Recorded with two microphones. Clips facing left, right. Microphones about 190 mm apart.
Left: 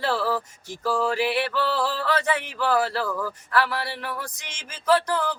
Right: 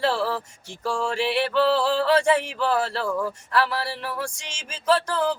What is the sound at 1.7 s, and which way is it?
Speech, 30° right (ahead or behind).